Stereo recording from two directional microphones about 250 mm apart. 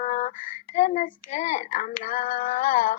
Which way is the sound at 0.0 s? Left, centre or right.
Left.